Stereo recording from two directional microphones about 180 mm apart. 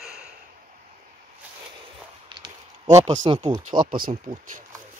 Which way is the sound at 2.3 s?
20° right (ahead or behind).